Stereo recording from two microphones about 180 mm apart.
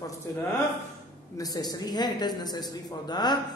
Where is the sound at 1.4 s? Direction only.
20° left (ahead or behind).